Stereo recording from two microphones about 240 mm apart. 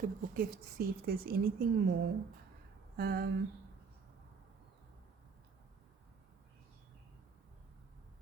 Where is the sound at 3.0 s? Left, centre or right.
Right.